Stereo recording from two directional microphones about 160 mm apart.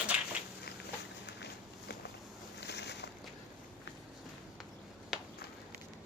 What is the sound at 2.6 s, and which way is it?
Boat, 90° left.